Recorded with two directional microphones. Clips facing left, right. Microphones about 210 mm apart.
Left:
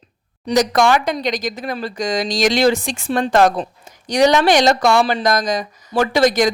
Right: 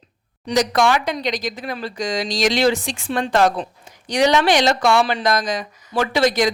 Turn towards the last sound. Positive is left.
turn(degrees=45)  # may be behind; listen again after turning